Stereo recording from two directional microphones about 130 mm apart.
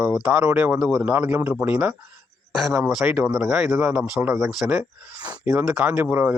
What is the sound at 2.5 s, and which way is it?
Speech, centre (ahead or behind).